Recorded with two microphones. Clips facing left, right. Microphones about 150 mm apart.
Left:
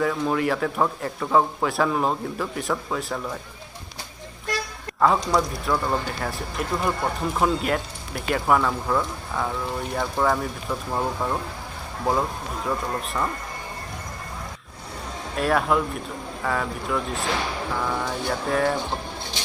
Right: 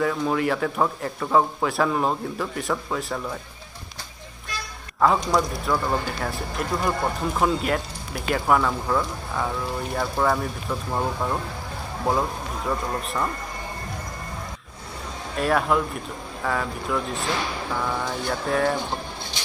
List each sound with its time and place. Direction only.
0.0 s speech: centre (ahead or behind)
5.0 s speech: centre (ahead or behind)
15.3 s speech: centre (ahead or behind)